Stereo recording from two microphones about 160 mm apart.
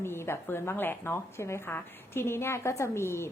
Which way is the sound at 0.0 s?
15° left (ahead or behind).